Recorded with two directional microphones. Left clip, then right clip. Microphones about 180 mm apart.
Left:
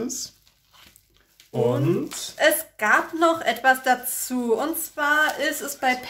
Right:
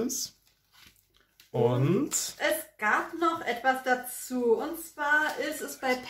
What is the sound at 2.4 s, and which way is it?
A woman's voice, 45° left (ahead or behind).